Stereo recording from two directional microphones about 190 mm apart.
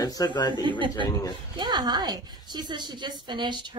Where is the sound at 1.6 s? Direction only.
20° right (ahead or behind).